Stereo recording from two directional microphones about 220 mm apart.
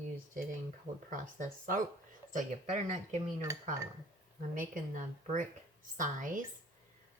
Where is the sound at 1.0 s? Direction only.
35° right (ahead or behind).